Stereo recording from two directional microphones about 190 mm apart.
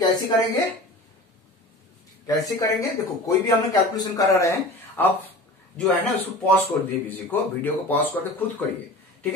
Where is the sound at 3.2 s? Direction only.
20° left (ahead or behind).